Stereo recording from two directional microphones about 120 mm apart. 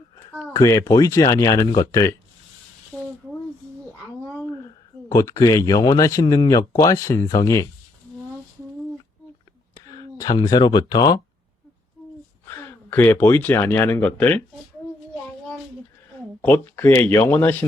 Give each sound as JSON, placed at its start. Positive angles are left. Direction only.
{"t": 0.3, "sound": "speech", "side_deg": 25}
{"t": 5.0, "sound": "speech", "side_deg": 25}
{"t": 9.8, "sound": "speech", "side_deg": 30}
{"t": 12.5, "sound": "speech", "side_deg": 20}
{"t": 16.4, "sound": "speech", "side_deg": 15}